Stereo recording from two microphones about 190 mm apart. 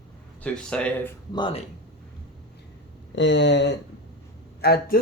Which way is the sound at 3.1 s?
70° left (ahead or behind).